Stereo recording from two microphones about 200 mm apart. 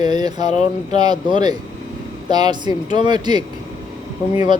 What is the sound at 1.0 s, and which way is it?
Speech, 20° right (ahead or behind).